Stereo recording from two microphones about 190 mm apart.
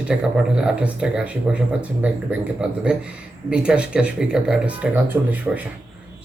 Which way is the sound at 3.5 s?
5° right (ahead or behind).